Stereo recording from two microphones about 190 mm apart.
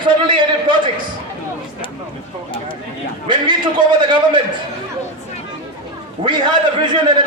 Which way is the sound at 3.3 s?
25° right (ahead or behind).